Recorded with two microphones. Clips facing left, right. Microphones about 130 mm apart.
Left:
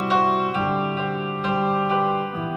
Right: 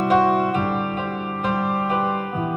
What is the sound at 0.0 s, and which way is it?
Music, 50° right (ahead or behind).